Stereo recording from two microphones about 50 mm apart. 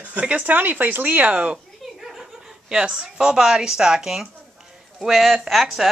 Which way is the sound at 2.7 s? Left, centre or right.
Centre.